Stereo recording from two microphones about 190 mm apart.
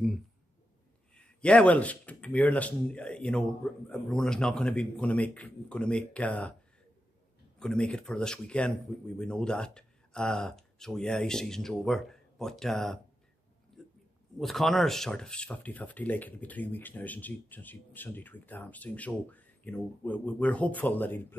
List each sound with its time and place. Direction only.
1.1 s speech: 5° left (ahead or behind)
7.5 s speech: 5° left (ahead or behind)
14.4 s speech: centre (ahead or behind)